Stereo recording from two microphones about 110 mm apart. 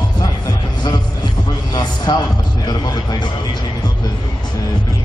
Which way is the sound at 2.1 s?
40° left (ahead or behind).